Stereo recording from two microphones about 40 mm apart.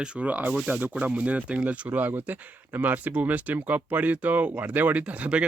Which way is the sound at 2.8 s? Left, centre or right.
Right.